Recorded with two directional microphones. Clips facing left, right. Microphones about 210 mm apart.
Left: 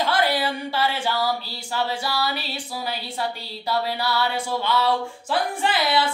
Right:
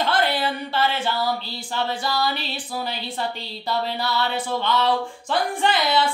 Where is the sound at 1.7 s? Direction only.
10° left (ahead or behind).